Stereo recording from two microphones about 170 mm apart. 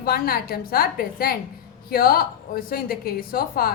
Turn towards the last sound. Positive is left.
turn(degrees=60)  # may be behind; listen again after turning